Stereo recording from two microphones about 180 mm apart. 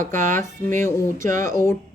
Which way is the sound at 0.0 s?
45° right (ahead or behind).